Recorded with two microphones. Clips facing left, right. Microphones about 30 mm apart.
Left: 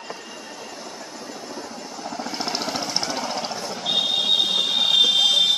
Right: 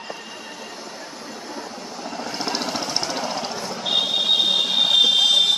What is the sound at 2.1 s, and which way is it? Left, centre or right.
Jackhammer, centre.